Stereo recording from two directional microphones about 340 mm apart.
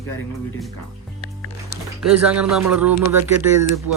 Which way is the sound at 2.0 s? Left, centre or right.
Centre.